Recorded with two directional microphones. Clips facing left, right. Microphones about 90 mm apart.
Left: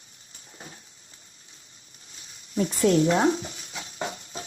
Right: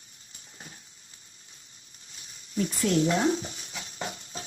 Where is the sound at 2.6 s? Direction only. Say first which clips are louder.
Left 4 dB; 35° left (ahead or behind).